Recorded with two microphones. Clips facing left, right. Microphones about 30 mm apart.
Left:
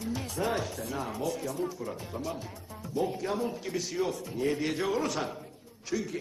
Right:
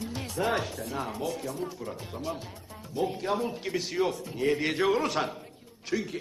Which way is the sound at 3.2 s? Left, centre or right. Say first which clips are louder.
Right 2 dB; right.